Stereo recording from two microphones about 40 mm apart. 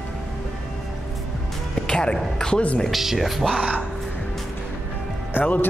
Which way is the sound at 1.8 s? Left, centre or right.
Left.